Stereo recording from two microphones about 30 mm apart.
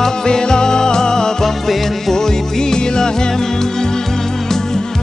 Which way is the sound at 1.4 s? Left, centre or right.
Centre.